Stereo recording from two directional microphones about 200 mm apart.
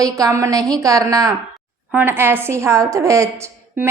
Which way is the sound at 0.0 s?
15° right (ahead or behind).